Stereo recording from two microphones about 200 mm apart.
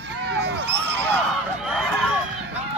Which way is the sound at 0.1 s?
60° right (ahead or behind).